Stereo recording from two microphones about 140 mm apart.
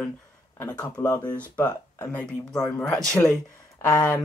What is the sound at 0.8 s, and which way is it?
Speech, 15° left (ahead or behind).